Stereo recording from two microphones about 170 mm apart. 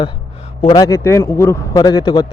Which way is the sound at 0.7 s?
20° left (ahead or behind).